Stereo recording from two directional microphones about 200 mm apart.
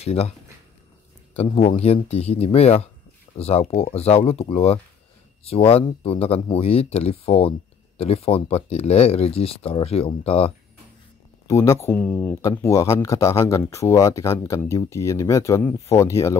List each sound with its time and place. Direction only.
0.0 s speech: 30° left (ahead or behind)
1.3 s speech: 30° left (ahead or behind)
11.4 s speech: 15° left (ahead or behind)